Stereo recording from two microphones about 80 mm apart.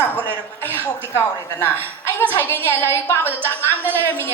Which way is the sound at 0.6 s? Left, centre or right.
Right.